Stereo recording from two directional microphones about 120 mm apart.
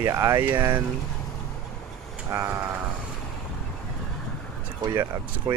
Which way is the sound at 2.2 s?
20° right (ahead or behind).